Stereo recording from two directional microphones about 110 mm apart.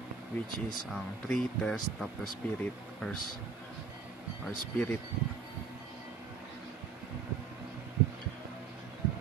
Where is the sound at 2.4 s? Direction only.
15° left (ahead or behind).